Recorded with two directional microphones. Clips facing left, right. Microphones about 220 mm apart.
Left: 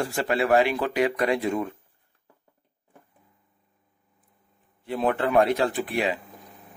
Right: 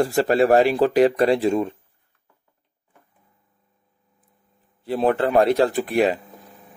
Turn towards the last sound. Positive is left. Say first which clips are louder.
# right 6 dB
turn(degrees=-45)  # may be behind; listen again after turning